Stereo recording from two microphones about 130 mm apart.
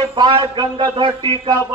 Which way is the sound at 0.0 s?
40° right (ahead or behind).